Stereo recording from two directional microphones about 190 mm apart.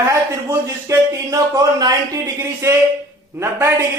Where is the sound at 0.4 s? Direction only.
20° right (ahead or behind).